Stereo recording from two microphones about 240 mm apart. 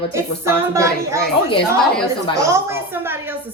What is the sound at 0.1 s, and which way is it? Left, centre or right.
Speech, centre.